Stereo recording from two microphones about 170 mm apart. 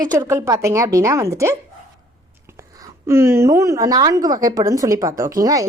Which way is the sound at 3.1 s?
15° right (ahead or behind).